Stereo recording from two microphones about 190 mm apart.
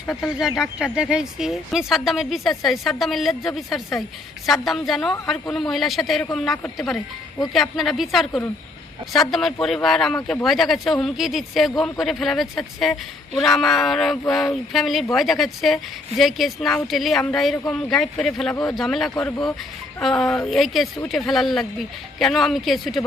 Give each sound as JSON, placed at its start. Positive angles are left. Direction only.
{"t": 0.1, "sound": "speech", "side_deg": 0}